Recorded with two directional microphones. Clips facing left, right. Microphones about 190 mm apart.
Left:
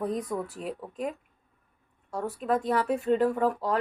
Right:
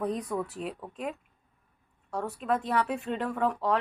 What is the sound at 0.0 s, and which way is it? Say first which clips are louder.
A woman's voice: left 1 dB; centre (ahead or behind).